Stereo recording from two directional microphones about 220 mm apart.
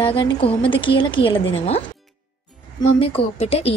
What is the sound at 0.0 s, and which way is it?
Speech, 25° left (ahead or behind).